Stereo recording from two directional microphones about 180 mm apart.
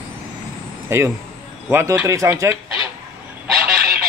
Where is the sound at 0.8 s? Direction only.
15° right (ahead or behind).